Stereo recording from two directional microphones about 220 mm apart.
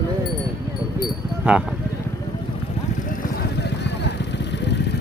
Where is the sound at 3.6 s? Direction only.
50° left (ahead or behind).